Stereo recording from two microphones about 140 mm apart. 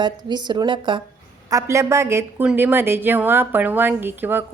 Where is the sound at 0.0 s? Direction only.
30° right (ahead or behind).